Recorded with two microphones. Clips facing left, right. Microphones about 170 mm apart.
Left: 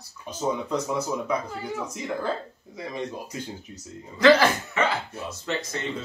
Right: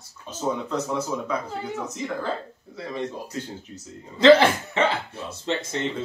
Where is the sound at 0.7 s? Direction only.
10° left (ahead or behind).